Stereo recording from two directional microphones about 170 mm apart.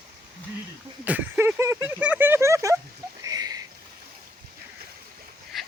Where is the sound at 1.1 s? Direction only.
10° right (ahead or behind).